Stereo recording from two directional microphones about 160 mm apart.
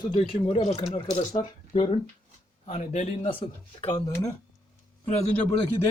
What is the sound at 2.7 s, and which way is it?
Speech, 45° left (ahead or behind).